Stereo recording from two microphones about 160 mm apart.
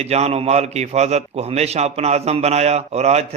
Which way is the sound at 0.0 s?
40° right (ahead or behind).